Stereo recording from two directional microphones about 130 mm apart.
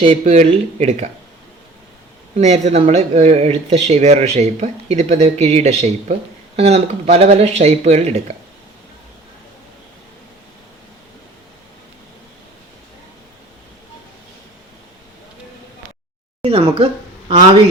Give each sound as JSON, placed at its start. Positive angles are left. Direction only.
{"t": 0.0, "sound": "speech", "side_deg": -45}
{"t": 0.3, "sound": "speech", "side_deg": -55}
{"t": 2.4, "sound": "speech", "side_deg": -60}
{"t": 16.4, "sound": "speech", "side_deg": -50}